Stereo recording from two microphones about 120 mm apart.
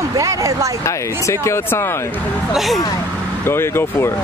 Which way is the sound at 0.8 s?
25° left (ahead or behind).